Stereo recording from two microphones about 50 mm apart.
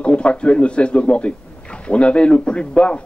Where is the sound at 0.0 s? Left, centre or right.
Left.